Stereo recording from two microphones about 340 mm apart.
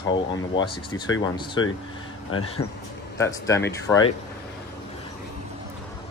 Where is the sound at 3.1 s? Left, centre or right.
Centre.